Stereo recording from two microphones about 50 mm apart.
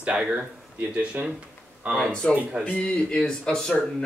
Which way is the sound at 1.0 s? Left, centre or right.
Right.